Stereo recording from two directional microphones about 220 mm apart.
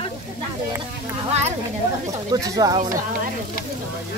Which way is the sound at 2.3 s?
15° right (ahead or behind).